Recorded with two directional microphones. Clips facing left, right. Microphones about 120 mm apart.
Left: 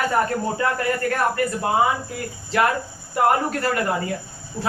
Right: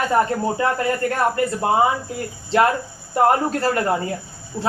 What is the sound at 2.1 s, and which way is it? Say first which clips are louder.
Speech: right 4 dB; 30° right (ahead or behind).